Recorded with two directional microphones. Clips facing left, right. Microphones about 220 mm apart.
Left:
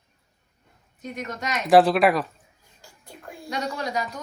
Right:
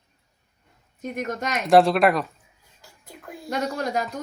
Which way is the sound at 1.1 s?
45° right (ahead or behind).